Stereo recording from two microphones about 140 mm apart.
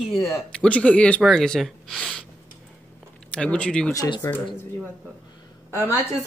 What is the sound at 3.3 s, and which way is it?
Speech, 10° left (ahead or behind).